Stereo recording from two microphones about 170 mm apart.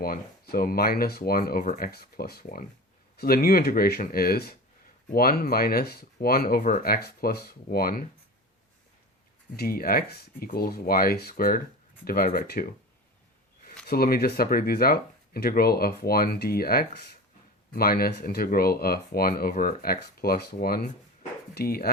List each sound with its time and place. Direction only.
0.0 s speech: 60° left (ahead or behind)
9.6 s speech: 60° left (ahead or behind)
13.8 s speech: 65° left (ahead or behind)